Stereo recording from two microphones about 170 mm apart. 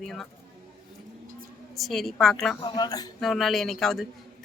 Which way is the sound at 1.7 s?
Centre (ahead or behind).